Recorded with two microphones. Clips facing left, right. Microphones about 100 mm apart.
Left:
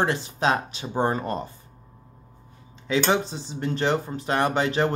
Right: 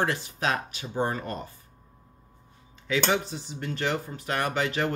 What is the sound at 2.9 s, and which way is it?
Speech, 25° left (ahead or behind).